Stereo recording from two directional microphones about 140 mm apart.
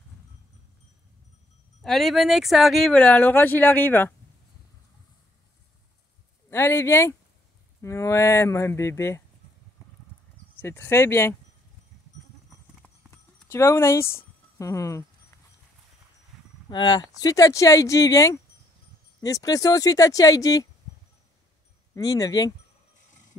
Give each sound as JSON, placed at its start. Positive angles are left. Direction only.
{"t": 1.8, "sound": "speech", "side_deg": 0}
{"t": 6.5, "sound": "speech", "side_deg": 20}
{"t": 10.6, "sound": "speech", "side_deg": 15}
{"t": 12.8, "sound": "horse", "side_deg": 15}
{"t": 16.6, "sound": "speech", "side_deg": 30}
{"t": 21.9, "sound": "speech", "side_deg": 25}